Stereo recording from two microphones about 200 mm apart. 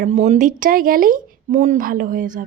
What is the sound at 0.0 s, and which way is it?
Speech, 35° right (ahead or behind).